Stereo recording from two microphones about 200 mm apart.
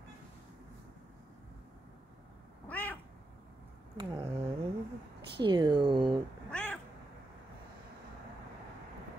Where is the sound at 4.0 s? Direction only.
25° right (ahead or behind).